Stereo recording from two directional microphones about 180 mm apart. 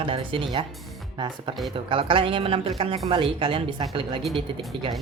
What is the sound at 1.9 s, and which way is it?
Speech, 30° right (ahead or behind).